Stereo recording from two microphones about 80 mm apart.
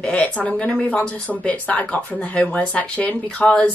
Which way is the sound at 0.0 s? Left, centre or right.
Centre.